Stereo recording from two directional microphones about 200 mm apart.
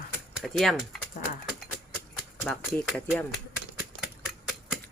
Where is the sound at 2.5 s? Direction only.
Centre (ahead or behind).